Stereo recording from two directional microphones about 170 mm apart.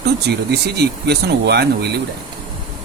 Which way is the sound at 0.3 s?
75° right (ahead or behind).